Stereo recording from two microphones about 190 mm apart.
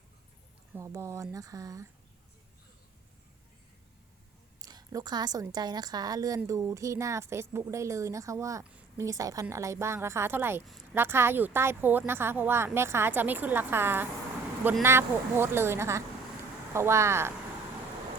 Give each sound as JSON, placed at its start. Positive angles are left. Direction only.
{"t": 0.7, "sound": "a woman's voice", "side_deg": -15}
{"t": 4.6, "sound": "a woman's voice", "side_deg": -20}